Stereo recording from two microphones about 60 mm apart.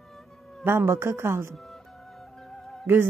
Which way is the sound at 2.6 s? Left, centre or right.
Centre.